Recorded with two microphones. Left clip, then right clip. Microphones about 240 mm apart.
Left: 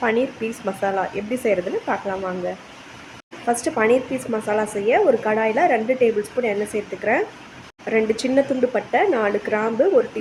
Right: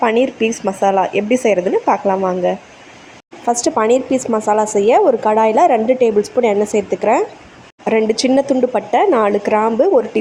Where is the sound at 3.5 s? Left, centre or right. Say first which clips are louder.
Right 5 dB; right.